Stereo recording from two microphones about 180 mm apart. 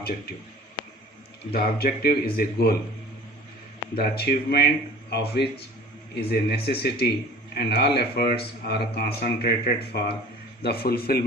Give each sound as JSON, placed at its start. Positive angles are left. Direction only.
{"t": 1.5, "sound": "speech", "side_deg": 60}
{"t": 3.9, "sound": "speech", "side_deg": 60}